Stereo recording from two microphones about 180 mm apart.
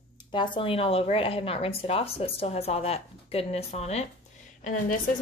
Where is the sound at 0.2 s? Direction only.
25° left (ahead or behind).